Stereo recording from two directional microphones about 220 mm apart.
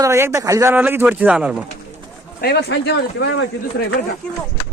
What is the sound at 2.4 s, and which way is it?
Speech, 45° left (ahead or behind).